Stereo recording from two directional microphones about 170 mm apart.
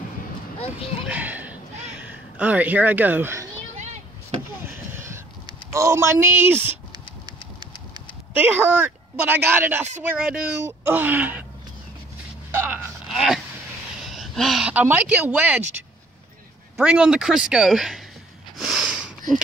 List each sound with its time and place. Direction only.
1.0 s a sound: 10° right (ahead or behind)
3.7 s a sound: 45° right (ahead or behind)
4.6 s vehicle: 15° right (ahead or behind)
5.5 s speech: 15° right (ahead or behind)
8.3 s speech: 10° right (ahead or behind)
12.4 s a sound: 10° right (ahead or behind)
14.0 s speech: centre (ahead or behind)
16.7 s speech: 5° right (ahead or behind)
18.6 s sniff: centre (ahead or behind)